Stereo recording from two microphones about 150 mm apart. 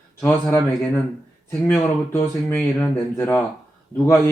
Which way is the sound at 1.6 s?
15° left (ahead or behind).